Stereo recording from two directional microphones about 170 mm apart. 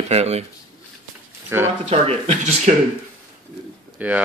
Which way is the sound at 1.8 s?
40° right (ahead or behind).